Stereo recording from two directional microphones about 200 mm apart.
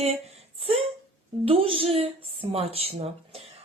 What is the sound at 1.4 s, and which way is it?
A woman's voice, 30° right (ahead or behind).